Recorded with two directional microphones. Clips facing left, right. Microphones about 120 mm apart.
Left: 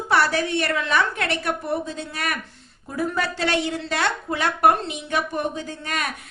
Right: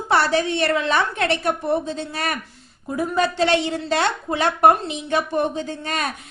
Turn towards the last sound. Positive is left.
turn(degrees=-30)  # may be behind; listen again after turning